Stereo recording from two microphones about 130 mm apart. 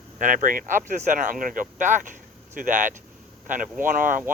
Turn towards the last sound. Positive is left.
turn(degrees=-90)